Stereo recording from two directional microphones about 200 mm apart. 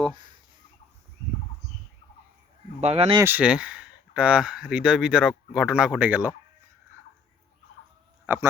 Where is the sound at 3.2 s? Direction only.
10° right (ahead or behind).